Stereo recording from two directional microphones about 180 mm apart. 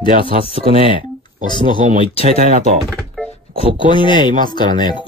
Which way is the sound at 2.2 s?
40° right (ahead or behind).